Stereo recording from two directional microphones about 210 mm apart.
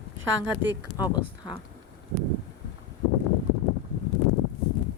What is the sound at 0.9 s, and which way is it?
Speech, 20° left (ahead or behind).